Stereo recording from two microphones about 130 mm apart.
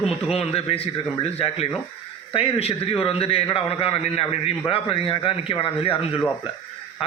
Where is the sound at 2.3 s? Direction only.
50° left (ahead or behind).